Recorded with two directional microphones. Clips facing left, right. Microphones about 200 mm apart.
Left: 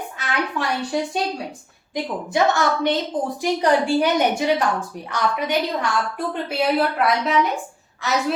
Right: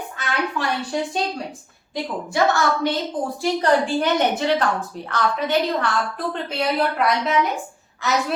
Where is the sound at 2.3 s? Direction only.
20° left (ahead or behind).